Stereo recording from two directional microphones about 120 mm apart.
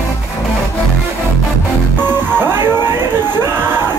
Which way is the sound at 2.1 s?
20° right (ahead or behind).